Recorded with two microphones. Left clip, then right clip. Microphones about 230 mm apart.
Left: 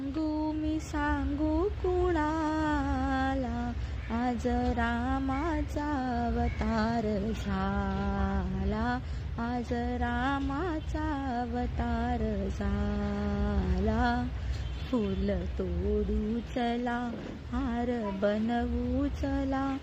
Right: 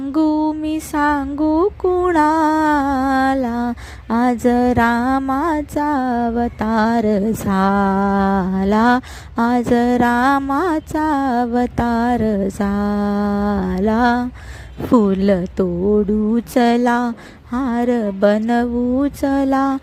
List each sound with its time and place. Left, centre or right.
0.2 s mantra: right
2.0 s music: right
4.1 s a sound: right